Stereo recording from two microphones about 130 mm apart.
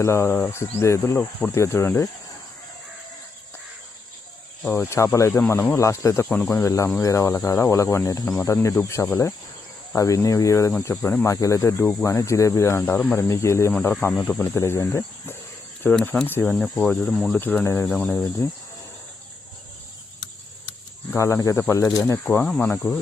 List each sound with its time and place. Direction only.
0.0 s speech: 20° left (ahead or behind)
4.7 s speech: 20° left (ahead or behind); by 17.4 s 5° left (ahead or behind)
17.4 s speech: 15° left (ahead or behind)
21.2 s speech: 20° left (ahead or behind)
22.4 s speech: 5° left (ahead or behind)